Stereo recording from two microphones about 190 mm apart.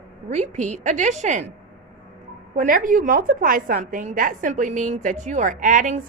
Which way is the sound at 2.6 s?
45° right (ahead or behind).